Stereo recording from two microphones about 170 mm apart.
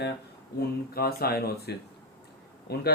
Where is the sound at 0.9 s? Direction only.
65° left (ahead or behind).